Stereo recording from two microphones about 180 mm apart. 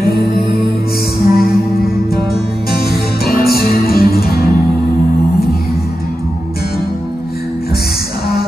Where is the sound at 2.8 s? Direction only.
60° left (ahead or behind).